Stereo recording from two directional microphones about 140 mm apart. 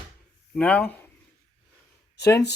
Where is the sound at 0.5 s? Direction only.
10° left (ahead or behind).